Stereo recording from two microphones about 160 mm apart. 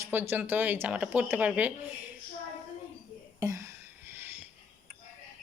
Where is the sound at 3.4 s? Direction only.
20° right (ahead or behind).